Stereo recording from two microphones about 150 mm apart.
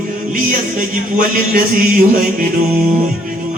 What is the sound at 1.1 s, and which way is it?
Speech, 65° right (ahead or behind).